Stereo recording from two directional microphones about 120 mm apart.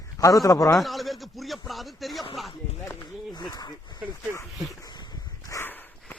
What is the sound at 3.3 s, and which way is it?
Speech, 35° left (ahead or behind).